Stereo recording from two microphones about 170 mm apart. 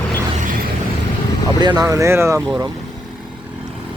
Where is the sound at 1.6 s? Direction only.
25° right (ahead or behind).